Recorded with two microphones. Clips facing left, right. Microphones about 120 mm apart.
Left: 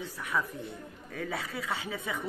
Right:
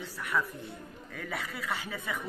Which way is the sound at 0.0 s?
15° left (ahead or behind).